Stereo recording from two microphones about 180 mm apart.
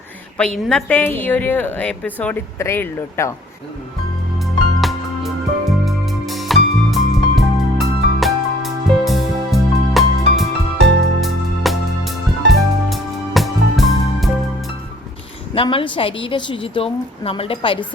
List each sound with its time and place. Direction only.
0.6 s a woman's voice: centre (ahead or behind)
4.8 s music: centre (ahead or behind)
15.5 s a woman's voice: 30° left (ahead or behind)